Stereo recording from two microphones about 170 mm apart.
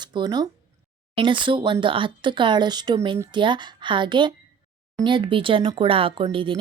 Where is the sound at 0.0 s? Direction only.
25° right (ahead or behind).